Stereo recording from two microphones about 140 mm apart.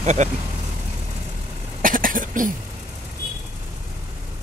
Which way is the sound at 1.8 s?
80° right.